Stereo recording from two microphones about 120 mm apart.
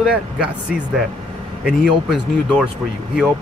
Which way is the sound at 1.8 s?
5° right (ahead or behind).